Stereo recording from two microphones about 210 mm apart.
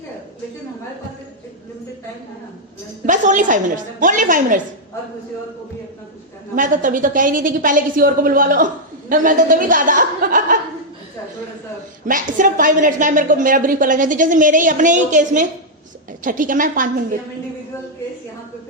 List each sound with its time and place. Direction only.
3.1 s a woman's voice: 35° right (ahead or behind)
6.6 s a woman's voice: 40° right (ahead or behind)
12.0 s a woman's voice: 40° right (ahead or behind)